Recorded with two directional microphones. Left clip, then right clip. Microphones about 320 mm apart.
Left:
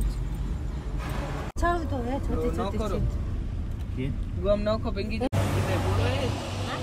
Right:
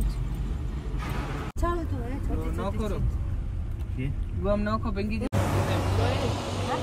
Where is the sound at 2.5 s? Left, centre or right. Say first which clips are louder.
Left 2 dB; centre.